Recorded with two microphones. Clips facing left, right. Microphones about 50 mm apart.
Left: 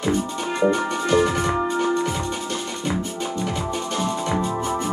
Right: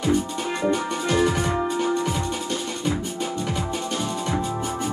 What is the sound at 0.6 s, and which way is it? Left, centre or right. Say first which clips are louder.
Music: left 4 dB; centre.